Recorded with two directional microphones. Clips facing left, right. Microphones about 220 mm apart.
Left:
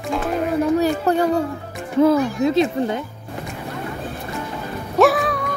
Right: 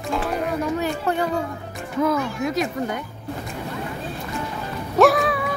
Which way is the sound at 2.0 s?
30° left (ahead or behind).